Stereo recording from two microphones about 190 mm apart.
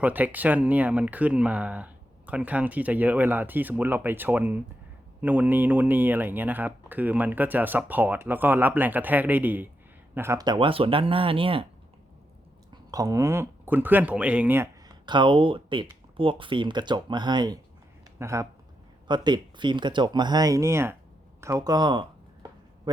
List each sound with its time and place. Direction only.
0.0 s speech: 10° right (ahead or behind); by 11.6 s 30° right (ahead or behind)
12.7 s speech: 20° right (ahead or behind)